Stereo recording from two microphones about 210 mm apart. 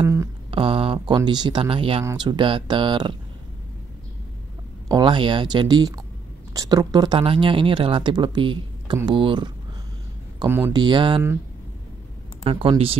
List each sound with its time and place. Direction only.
0.0 s a sound: 15° right (ahead or behind)
0.5 s speech: 25° right (ahead or behind)
4.8 s speech: 20° right (ahead or behind)
12.4 s speech: 25° right (ahead or behind)